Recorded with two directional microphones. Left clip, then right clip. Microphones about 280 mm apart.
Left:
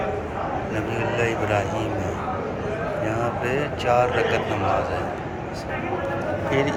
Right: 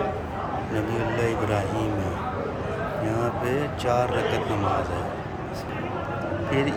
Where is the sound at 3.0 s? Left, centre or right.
Centre.